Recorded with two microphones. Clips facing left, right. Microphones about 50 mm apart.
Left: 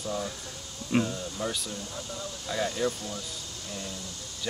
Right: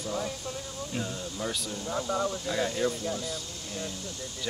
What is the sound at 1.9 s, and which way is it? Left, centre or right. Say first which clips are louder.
Speech: right 9 dB; right.